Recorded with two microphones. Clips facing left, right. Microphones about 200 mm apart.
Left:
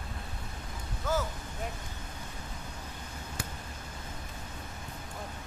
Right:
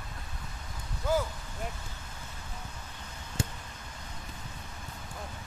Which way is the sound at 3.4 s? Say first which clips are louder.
Right 7 dB; 25° right (ahead or behind).